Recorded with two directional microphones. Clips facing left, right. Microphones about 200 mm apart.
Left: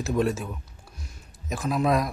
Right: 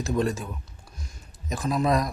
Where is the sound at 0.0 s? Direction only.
5° left (ahead or behind).